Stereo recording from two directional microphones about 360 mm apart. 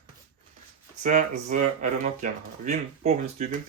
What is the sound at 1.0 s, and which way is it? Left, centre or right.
Speech, centre.